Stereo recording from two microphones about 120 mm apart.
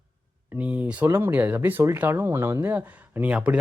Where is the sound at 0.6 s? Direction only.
10° right (ahead or behind).